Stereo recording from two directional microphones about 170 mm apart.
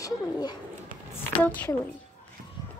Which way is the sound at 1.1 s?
10° left (ahead or behind).